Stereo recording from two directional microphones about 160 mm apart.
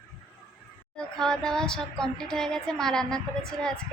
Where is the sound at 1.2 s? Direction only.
5° left (ahead or behind).